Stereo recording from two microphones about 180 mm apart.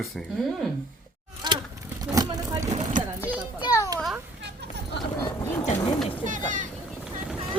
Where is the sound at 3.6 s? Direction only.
20° left (ahead or behind).